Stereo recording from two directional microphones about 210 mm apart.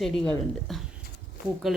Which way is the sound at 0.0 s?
Centre (ahead or behind).